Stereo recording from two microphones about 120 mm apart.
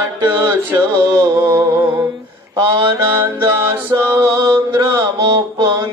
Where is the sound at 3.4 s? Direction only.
20° right (ahead or behind).